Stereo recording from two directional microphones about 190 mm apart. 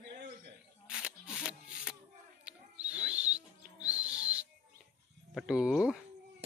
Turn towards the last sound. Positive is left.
turn(degrees=-5)  # may be behind; listen again after turning